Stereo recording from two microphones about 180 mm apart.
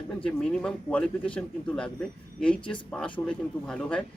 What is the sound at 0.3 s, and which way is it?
Speech, 5° left (ahead or behind).